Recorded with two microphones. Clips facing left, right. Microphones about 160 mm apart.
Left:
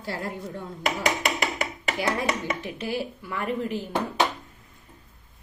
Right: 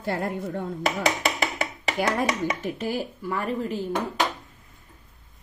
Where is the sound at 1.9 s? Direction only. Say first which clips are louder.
Right 2 dB; 45° right (ahead or behind).